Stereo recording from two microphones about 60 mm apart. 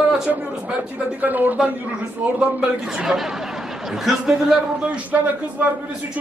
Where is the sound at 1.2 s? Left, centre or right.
Right.